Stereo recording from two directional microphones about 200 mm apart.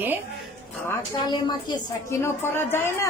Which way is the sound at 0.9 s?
20° left (ahead or behind).